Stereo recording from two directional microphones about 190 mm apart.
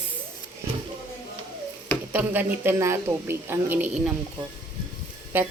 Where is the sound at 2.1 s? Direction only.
10° right (ahead or behind).